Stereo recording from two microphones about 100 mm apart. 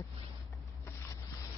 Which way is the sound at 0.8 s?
25° left (ahead or behind).